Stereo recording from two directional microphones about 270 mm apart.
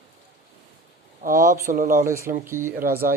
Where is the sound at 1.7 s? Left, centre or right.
Right.